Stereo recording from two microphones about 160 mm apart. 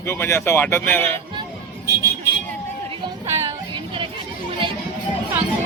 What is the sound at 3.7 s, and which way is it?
Music, 30° right (ahead or behind).